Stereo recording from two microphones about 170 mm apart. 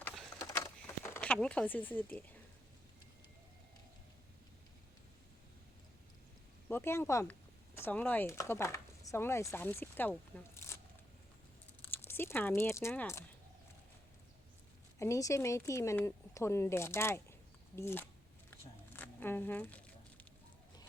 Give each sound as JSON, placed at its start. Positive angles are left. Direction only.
{"t": 0.0, "sound": "a sound", "side_deg": 0}
{"t": 0.3, "sound": "a sound", "side_deg": 20}
{"t": 6.7, "sound": "speech", "side_deg": 15}
{"t": 11.9, "sound": "speech", "side_deg": 10}
{"t": 14.9, "sound": "speech", "side_deg": 20}
{"t": 18.9, "sound": "zipper", "side_deg": 10}